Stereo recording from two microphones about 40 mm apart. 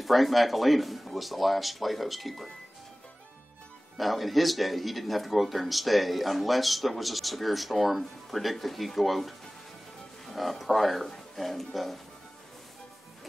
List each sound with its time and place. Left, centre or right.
0.0 s speech: centre
4.0 s speech: centre